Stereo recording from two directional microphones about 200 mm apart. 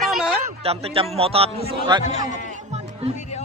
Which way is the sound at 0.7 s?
30° right (ahead or behind).